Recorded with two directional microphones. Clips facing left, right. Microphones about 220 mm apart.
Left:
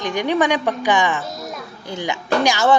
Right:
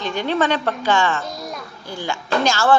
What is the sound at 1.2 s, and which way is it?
Music, centre (ahead or behind).